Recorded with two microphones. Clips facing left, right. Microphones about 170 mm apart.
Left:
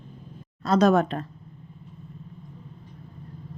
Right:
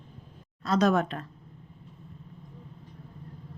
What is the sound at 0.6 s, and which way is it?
Speech, 35° left (ahead or behind).